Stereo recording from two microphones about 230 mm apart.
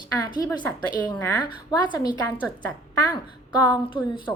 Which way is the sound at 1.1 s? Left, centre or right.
Centre.